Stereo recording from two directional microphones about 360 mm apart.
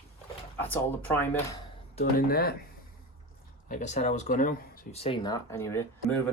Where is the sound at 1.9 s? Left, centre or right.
Left.